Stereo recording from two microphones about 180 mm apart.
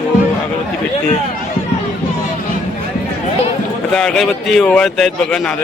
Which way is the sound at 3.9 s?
5° left (ahead or behind).